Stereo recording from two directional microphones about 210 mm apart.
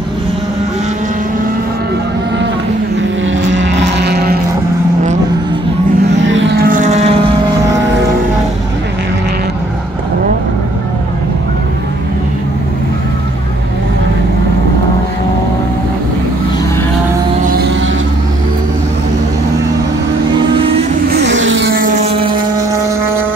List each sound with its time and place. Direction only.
3.3 s vehicle: 60° right (ahead or behind)
6.0 s vehicle: 60° right (ahead or behind); by 7.2 s 30° right (ahead or behind)
17.5 s music: 50° right (ahead or behind)
21.1 s vehicle: 60° right (ahead or behind)
21.9 s motorboat: 30° right (ahead or behind)